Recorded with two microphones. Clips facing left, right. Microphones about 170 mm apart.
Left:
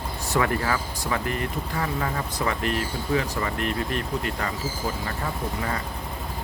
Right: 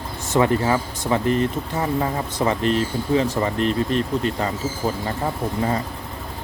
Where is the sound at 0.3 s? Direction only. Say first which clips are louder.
Right 6 dB; 25° right (ahead or behind).